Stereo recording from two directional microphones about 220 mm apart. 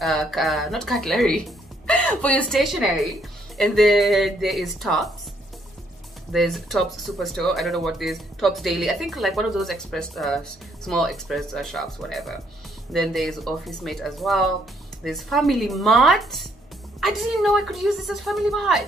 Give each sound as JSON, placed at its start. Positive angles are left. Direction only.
{"t": 0.0, "sound": "speech", "side_deg": 0}
{"t": 6.3, "sound": "speech", "side_deg": 0}